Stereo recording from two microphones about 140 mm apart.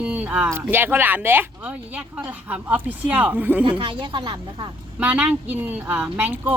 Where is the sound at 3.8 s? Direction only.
35° right (ahead or behind).